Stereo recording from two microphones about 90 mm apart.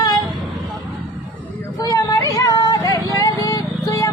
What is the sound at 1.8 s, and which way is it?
Vehicle, 40° left (ahead or behind).